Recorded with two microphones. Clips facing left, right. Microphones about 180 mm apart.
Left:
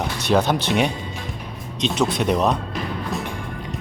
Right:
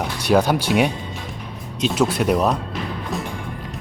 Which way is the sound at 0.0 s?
10° right (ahead or behind).